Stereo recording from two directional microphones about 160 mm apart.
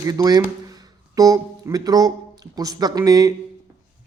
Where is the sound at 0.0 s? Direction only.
25° right (ahead or behind).